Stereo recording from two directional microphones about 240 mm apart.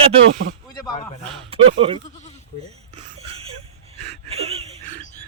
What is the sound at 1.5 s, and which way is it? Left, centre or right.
Speech, right.